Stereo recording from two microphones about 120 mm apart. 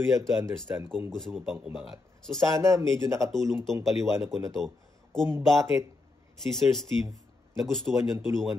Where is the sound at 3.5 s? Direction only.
5° left (ahead or behind).